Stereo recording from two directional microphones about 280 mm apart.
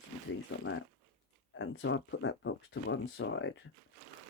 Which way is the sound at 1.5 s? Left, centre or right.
Left.